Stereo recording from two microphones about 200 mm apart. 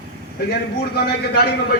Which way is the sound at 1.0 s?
55° left (ahead or behind).